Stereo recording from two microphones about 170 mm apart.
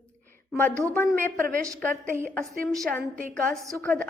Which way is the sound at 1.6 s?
15° right (ahead or behind).